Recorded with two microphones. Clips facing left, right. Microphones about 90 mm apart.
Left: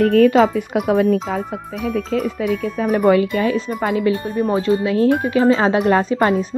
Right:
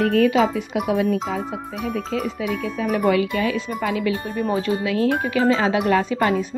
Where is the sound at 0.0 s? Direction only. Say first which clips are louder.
Left 5 dB; 45° left (ahead or behind).